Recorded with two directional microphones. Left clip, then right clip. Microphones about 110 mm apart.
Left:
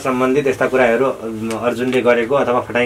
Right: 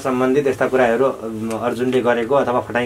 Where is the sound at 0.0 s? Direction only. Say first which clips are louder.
Left 1 dB; 10° right (ahead or behind).